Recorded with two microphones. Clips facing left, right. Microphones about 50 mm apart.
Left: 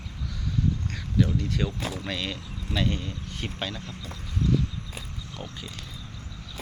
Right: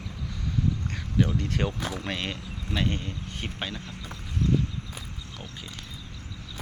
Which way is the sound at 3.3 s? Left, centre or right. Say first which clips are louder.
Left 2 dB; right.